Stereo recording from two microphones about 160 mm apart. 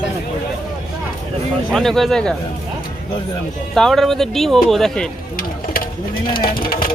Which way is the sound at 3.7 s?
Centre (ahead or behind).